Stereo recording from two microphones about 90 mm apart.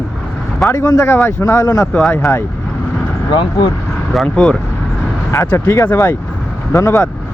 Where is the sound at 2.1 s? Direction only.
30° left (ahead or behind).